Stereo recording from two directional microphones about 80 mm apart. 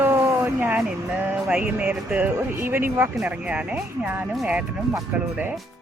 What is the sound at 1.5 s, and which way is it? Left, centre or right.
Speech, centre.